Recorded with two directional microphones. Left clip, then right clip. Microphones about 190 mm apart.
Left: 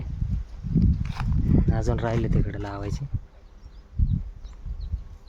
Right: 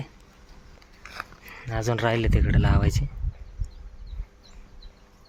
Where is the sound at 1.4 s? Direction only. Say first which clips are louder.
Left 2 dB; 15° left (ahead or behind).